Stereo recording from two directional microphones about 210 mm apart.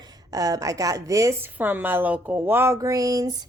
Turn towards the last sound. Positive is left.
turn(degrees=-15)  # may be behind; listen again after turning